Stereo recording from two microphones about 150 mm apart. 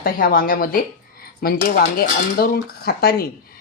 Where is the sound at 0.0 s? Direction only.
70° left (ahead or behind).